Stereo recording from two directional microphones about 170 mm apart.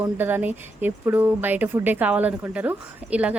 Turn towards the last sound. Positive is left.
turn(degrees=-10)  # may be behind; listen again after turning